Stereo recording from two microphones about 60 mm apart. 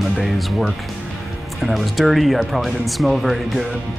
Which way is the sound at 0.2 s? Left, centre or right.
Centre.